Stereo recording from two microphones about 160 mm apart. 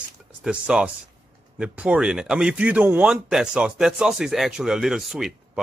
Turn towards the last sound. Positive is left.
turn(degrees=0)  # may be behind; listen again after turning